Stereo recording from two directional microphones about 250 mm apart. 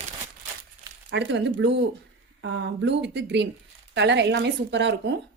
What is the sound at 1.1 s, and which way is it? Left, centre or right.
Speech, right.